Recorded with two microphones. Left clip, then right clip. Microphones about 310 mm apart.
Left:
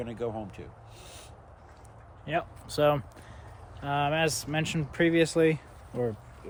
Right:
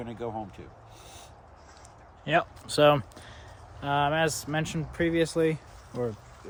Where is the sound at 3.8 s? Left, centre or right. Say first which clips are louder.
Right 2 dB; centre.